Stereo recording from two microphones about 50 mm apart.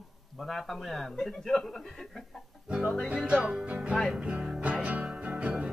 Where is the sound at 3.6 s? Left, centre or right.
Right.